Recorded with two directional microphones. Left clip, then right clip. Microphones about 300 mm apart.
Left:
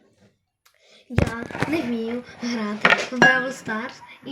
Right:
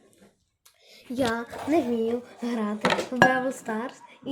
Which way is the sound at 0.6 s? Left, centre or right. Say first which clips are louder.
Even; centre.